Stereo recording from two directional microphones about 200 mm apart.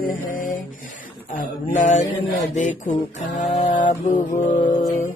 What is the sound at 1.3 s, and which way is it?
Music, 40° left (ahead or behind).